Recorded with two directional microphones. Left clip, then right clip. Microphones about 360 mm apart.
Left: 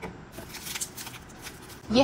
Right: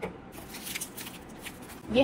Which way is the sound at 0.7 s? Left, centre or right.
Centre.